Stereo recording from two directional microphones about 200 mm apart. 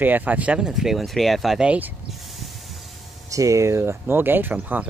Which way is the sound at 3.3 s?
15° right (ahead or behind).